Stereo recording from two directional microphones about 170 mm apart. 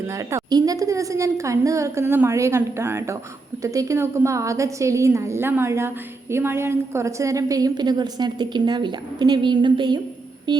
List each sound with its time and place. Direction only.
0.1 s a woman's voice: 20° right (ahead or behind)